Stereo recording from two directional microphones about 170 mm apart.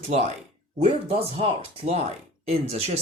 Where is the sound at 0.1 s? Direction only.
40° right (ahead or behind).